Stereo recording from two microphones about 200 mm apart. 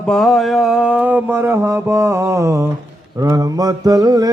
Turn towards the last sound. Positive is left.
turn(degrees=-20)  # may be behind; listen again after turning